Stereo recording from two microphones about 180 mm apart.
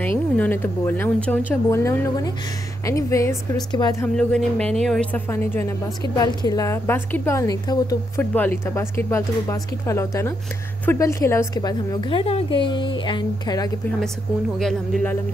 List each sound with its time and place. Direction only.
0.0 s a woman's voice: 10° left (ahead or behind)
4.0 s speech: 5° left (ahead or behind)
5.3 s a woman's voice: 10° left (ahead or behind)
14.6 s speech: centre (ahead or behind)